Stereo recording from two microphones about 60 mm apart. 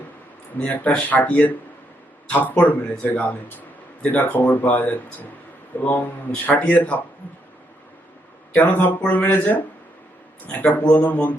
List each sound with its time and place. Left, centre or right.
0.7 s speech: left
8.5 s speech: left